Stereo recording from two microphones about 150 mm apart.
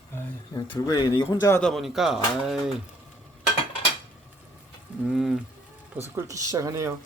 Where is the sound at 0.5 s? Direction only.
30° left (ahead or behind).